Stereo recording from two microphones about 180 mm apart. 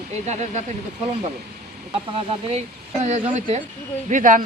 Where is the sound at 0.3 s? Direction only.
40° right (ahead or behind).